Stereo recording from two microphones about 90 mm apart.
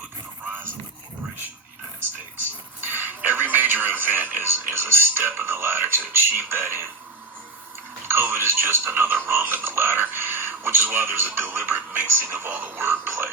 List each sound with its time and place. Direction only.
0.4 s a sound: 25° right (ahead or behind)
2.0 s speech: 25° right (ahead or behind)
8.0 s speech: 25° right (ahead or behind)